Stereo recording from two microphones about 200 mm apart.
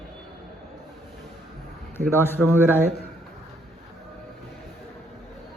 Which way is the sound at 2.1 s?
10° left (ahead or behind).